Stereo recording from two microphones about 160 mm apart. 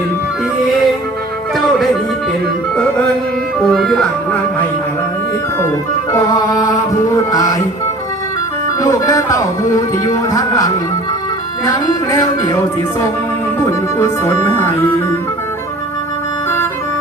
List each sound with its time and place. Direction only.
3.7 s music: 5° left (ahead or behind)
6.1 s music: 20° left (ahead or behind)
8.8 s music: 20° left (ahead or behind)
11.7 s music: 25° left (ahead or behind)
13.6 s speech: 20° left (ahead or behind)